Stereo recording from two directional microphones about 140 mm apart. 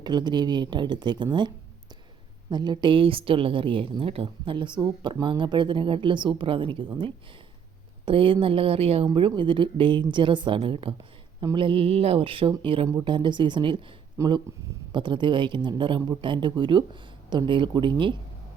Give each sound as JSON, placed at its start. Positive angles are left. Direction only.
{"t": 0.0, "sound": "speech", "side_deg": -30}
{"t": 8.0, "sound": "speech", "side_deg": -40}